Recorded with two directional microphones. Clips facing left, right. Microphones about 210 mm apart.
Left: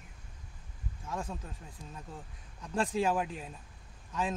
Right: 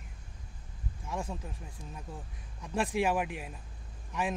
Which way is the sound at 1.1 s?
10° right (ahead or behind).